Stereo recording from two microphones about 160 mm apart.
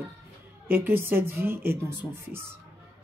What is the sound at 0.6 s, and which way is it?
Speech, 15° right (ahead or behind).